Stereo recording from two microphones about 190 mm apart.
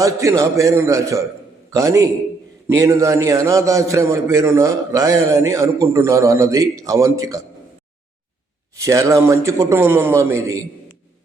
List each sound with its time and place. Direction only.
0.0 s a man's voice: 15° right (ahead or behind)
8.8 s a man's voice: 15° right (ahead or behind)